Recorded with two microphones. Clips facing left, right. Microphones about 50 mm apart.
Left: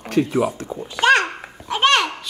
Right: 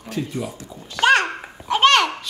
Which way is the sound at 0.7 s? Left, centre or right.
Centre.